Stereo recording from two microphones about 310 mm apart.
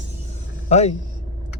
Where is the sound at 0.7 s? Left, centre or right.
Left.